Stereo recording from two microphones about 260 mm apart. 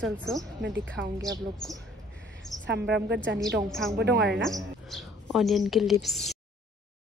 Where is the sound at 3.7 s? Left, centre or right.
Centre.